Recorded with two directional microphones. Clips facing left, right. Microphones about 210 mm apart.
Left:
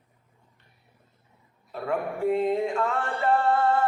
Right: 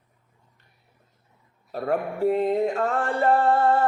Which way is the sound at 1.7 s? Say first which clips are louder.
Right 3 dB; 40° right (ahead or behind).